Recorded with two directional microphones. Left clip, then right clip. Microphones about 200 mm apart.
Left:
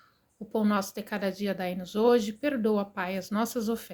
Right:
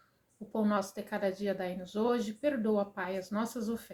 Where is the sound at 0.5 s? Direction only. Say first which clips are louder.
Left 4 dB; 45° left (ahead or behind).